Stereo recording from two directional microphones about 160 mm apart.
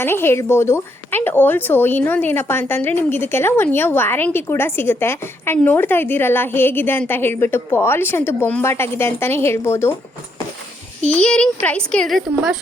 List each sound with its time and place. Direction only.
0.0 s speech: 15° left (ahead or behind)
11.1 s a child's voice: 5° left (ahead or behind)